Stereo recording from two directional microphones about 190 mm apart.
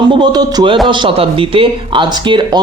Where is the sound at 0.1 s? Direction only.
20° right (ahead or behind).